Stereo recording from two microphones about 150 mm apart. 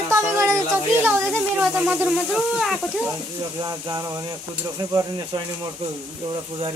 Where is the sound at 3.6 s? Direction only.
25° right (ahead or behind).